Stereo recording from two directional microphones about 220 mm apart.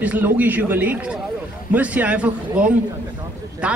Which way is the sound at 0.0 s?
5° right (ahead or behind).